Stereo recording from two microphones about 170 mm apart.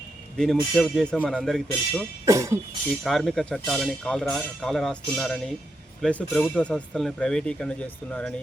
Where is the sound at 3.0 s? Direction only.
Centre (ahead or behind).